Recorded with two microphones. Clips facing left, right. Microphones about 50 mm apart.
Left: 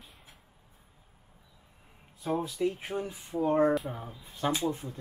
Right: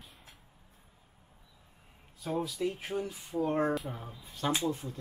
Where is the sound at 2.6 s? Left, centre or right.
Centre.